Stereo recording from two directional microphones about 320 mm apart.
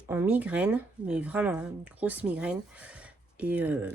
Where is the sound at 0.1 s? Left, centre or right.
Centre.